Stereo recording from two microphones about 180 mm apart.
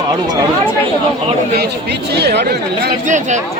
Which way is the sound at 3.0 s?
45° right (ahead or behind).